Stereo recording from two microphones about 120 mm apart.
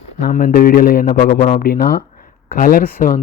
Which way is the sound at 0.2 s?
90° left.